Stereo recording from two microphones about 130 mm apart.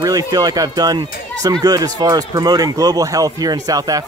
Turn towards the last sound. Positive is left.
turn(degrees=-30)  # may be behind; listen again after turning